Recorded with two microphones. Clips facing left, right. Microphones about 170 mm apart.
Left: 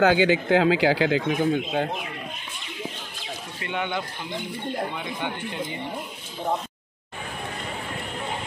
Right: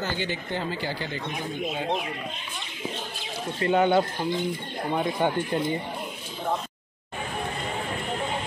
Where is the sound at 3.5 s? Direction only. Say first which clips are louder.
Right 9 dB; 40° right (ahead or behind).